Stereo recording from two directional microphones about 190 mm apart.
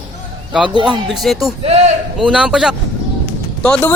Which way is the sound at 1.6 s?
35° right (ahead or behind).